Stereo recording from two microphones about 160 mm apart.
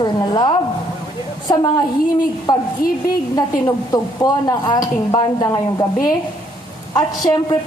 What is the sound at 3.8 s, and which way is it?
A woman's voice, 25° left (ahead or behind).